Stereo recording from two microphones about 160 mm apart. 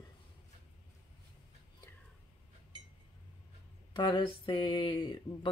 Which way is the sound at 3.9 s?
30° left (ahead or behind).